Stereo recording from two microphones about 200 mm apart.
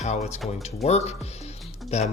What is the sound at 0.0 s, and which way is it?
Speech, 35° left (ahead or behind).